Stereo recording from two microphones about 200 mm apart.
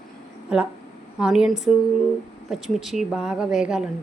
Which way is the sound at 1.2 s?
5° right (ahead or behind).